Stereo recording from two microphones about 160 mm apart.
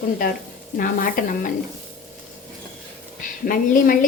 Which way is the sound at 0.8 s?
60° left (ahead or behind).